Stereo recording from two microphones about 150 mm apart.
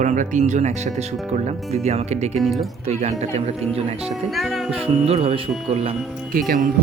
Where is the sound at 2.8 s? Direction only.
45° right (ahead or behind).